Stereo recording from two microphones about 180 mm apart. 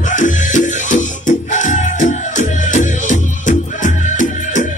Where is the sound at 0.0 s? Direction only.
45° left (ahead or behind).